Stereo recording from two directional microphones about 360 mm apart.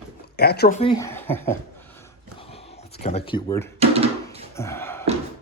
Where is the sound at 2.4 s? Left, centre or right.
Centre.